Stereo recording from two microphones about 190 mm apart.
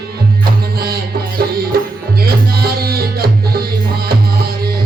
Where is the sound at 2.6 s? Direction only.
55° right (ahead or behind).